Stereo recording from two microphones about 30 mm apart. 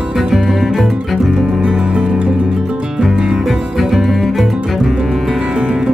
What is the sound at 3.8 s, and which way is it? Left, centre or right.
Music, centre.